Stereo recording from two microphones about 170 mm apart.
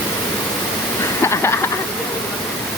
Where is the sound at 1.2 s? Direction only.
15° left (ahead or behind).